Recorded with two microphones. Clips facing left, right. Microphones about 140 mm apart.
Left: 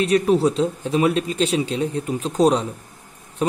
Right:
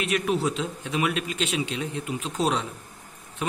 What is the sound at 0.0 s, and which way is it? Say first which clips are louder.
A man's voice: left 8 dB; 35° left (ahead or behind).